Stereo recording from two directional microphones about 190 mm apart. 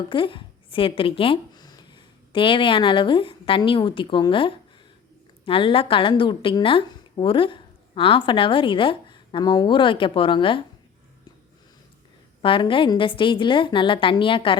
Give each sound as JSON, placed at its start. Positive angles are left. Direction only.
{"t": 0.1, "sound": "a woman's voice", "side_deg": 25}
{"t": 12.4, "sound": "a woman's voice", "side_deg": 25}